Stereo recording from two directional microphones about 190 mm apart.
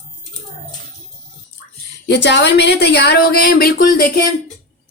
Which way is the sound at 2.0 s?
65° left (ahead or behind).